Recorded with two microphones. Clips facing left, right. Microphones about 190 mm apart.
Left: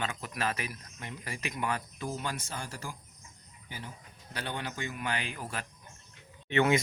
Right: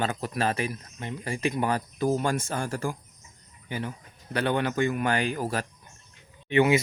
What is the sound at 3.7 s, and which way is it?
Speech, 65° right (ahead or behind).